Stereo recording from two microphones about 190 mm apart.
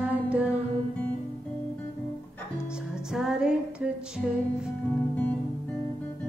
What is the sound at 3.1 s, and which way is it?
Music, 5° right (ahead or behind).